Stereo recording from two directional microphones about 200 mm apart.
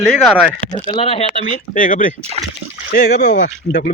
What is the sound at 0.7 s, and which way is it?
Speech, 25° left (ahead or behind).